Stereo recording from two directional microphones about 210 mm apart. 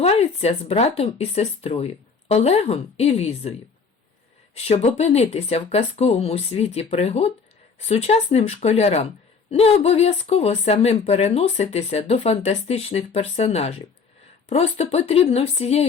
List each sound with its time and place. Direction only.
0.0 s speech: 30° left (ahead or behind)
4.5 s speech: 30° left (ahead or behind)